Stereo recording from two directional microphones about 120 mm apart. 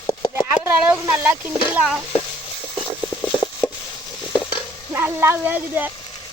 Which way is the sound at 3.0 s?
35° left (ahead or behind).